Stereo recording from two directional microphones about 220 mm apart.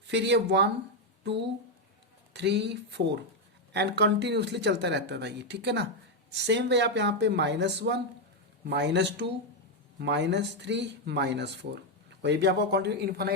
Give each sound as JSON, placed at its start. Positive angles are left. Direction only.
{"t": 0.1, "sound": "speech", "side_deg": -50}
{"t": 2.3, "sound": "speech", "side_deg": -50}